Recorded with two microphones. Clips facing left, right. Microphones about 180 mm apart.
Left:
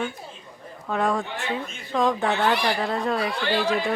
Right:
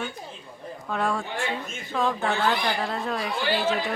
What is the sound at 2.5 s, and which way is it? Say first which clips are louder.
Speech: left 3 dB; 75° left (ahead or behind).